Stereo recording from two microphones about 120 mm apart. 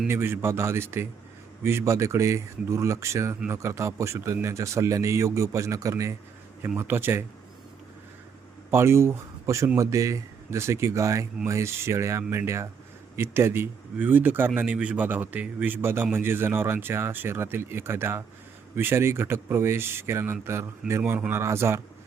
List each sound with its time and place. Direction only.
0.1 s speech: 20° right (ahead or behind)
8.7 s speech: 20° right (ahead or behind)